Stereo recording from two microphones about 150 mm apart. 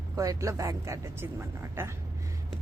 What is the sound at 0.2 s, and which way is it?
A woman's voice, 20° right (ahead or behind).